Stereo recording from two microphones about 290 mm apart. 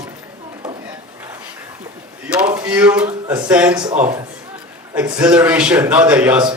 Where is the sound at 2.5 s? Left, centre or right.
Centre.